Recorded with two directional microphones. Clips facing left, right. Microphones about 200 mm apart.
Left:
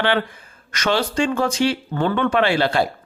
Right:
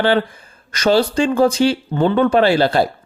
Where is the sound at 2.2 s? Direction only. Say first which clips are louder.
Right 5 dB; 35° right (ahead or behind).